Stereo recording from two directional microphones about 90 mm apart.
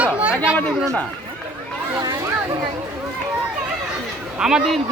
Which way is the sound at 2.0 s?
45° right (ahead or behind).